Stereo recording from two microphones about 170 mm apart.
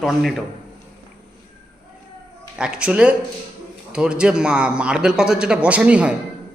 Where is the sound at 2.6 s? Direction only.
5° right (ahead or behind).